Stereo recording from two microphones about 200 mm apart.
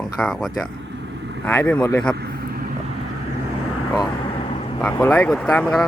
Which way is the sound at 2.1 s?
55° right (ahead or behind).